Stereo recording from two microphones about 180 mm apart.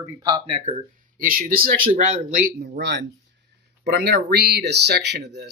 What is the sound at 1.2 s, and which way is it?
Speech, 50° right (ahead or behind).